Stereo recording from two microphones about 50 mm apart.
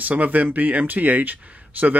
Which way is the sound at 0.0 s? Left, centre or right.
Right.